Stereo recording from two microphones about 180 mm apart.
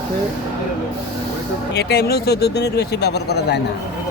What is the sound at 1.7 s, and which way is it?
Speech, 65° left (ahead or behind).